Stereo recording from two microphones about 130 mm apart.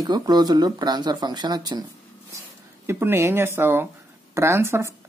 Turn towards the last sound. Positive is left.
turn(degrees=-20)  # may be behind; listen again after turning